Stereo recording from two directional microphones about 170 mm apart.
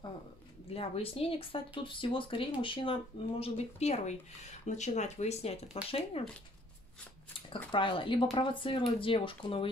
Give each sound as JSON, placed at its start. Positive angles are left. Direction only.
{"t": 0.7, "sound": "speech", "side_deg": 35}
{"t": 7.3, "sound": "shuffling cards", "side_deg": 30}
{"t": 7.7, "sound": "speech", "side_deg": 30}